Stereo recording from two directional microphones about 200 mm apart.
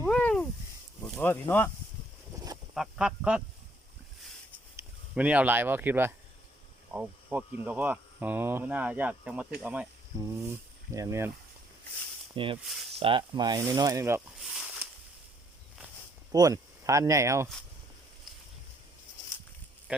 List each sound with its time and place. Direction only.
0.0 s a sound: 5° left (ahead or behind)
1.0 s speech: 5° left (ahead or behind)
2.3 s a sound: 15° right (ahead or behind)
2.7 s a sound: 5° right (ahead or behind)
5.1 s hum: 5° right (ahead or behind)
10.9 s hum: 15° right (ahead or behind)
12.3 s speech: 25° right (ahead or behind)
14.3 s snake: 5° right (ahead or behind)
16.3 s speech: 15° right (ahead or behind)